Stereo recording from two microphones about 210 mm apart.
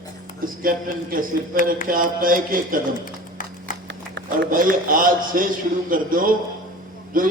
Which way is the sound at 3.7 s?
40° left (ahead or behind).